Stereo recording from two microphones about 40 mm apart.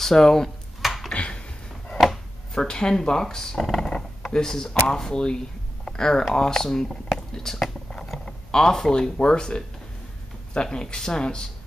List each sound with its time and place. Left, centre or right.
0.0 s speech: centre
1.1 s a sound: left
2.0 s chopping: centre
2.6 s speech: left